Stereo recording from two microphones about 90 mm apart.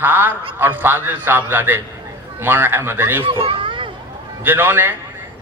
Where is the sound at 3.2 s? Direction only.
85° right.